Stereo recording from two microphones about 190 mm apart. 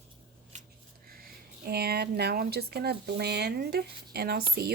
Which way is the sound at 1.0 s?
50° right (ahead or behind).